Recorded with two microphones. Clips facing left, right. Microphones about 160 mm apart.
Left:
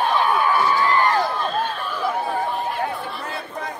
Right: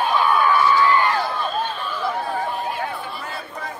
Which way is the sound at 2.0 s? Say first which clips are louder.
Left 2 dB; 5° left (ahead or behind).